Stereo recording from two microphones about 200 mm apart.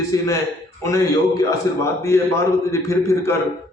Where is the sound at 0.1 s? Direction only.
15° left (ahead or behind).